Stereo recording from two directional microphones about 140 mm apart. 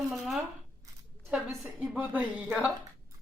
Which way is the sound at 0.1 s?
Centre (ahead or behind).